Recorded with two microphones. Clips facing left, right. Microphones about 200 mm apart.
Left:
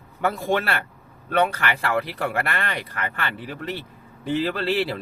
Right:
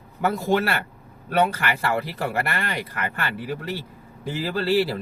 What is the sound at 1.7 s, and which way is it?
Speech, 5° right (ahead or behind).